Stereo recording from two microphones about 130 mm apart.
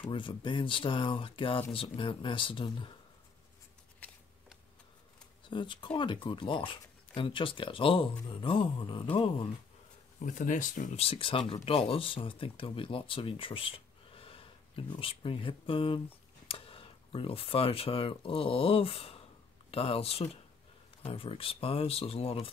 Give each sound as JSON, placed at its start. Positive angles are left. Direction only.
{"t": 0.0, "sound": "speech", "side_deg": 40}
{"t": 5.5, "sound": "speech", "side_deg": 40}
{"t": 10.2, "sound": "speech", "side_deg": 80}
{"t": 11.0, "sound": "speech", "side_deg": 45}